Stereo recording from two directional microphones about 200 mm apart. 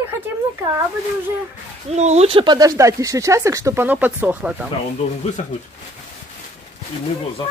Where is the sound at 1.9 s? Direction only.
35° right (ahead or behind); by 4.7 s 5° right (ahead or behind).